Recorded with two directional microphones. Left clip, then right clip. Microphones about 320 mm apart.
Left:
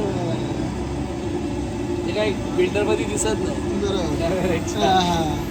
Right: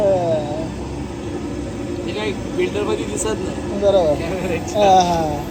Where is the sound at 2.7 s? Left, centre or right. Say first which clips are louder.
Even; centre.